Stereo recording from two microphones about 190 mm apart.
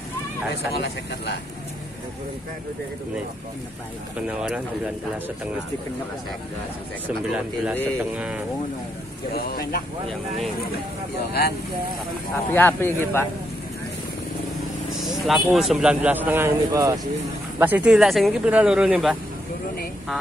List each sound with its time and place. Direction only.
0.7 s speech: 60° left (ahead or behind)
4.3 s speech: 5° right (ahead or behind)
7.2 s speech: 5° right (ahead or behind)
9.3 s speech: 50° left (ahead or behind)
12.4 s speech: 10° left (ahead or behind)
15.0 s speech: centre (ahead or behind)